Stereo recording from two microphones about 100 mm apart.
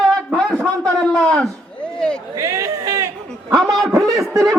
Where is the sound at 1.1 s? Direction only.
5° left (ahead or behind).